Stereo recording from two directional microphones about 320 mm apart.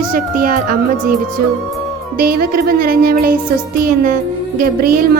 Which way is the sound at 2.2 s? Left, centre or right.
Right.